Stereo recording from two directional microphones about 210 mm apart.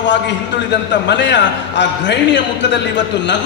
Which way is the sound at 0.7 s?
55° left (ahead or behind).